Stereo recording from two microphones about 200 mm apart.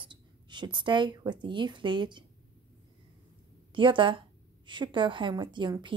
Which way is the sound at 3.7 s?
25° right (ahead or behind).